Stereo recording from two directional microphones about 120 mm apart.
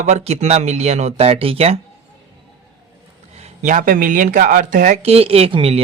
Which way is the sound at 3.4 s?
75° right (ahead or behind).